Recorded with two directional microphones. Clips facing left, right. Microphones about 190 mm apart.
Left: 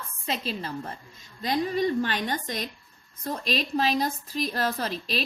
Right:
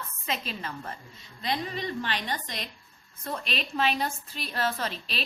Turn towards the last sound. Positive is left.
turn(degrees=40)  # may be behind; listen again after turning